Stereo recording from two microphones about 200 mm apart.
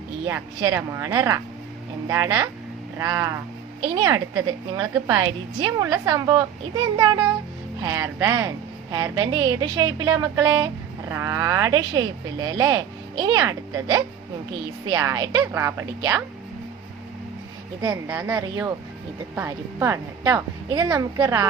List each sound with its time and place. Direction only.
0.3 s a woman's voice: 15° right (ahead or behind)
17.7 s speech: 20° right (ahead or behind)